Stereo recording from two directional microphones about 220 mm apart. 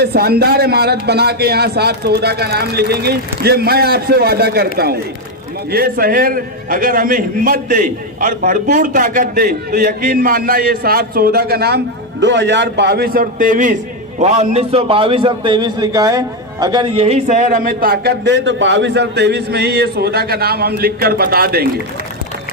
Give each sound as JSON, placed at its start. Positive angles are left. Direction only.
{"t": 0.0, "sound": "a man's voice", "side_deg": -45}